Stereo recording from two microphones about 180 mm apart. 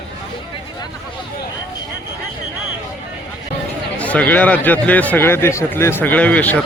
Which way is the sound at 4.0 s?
10° left (ahead or behind).